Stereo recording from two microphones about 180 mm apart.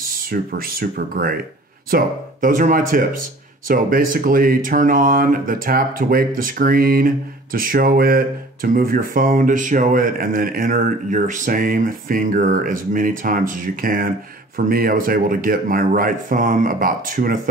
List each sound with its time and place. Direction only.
0.0 s speech: 55° right (ahead or behind)